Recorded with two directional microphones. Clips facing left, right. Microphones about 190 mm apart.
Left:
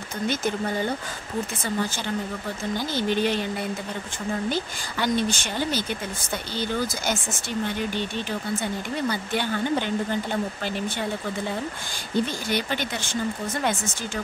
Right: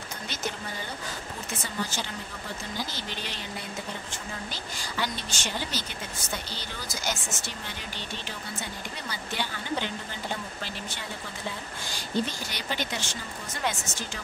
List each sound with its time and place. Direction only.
2.9 s speech: 55° left (ahead or behind)
4.5 s a woman's voice: 55° left (ahead or behind)
9.1 s a woman's voice: 55° left (ahead or behind)
12.4 s speech: 55° left (ahead or behind)